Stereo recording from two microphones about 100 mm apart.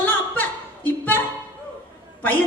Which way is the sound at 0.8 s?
20° left (ahead or behind).